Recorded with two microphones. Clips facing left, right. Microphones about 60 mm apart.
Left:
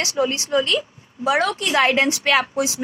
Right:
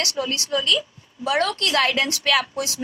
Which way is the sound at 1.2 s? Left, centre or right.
Centre.